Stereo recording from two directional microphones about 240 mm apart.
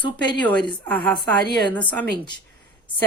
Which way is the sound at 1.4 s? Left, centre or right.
Right.